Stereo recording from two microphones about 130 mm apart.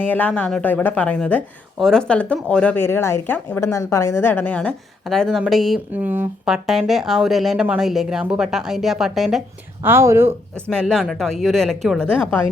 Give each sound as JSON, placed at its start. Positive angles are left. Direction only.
{"t": 0.0, "sound": "a woman's voice", "side_deg": 15}
{"t": 5.9, "sound": "speech", "side_deg": -15}
{"t": 6.4, "sound": "speech", "side_deg": 0}
{"t": 9.8, "sound": "speech", "side_deg": -20}
{"t": 10.5, "sound": "speech", "side_deg": 5}